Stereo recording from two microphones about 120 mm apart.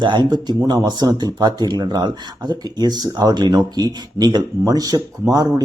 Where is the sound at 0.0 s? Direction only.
40° right (ahead or behind).